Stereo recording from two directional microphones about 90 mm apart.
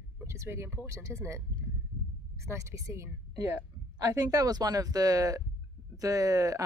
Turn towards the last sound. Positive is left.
turn(degrees=-40)  # may be behind; listen again after turning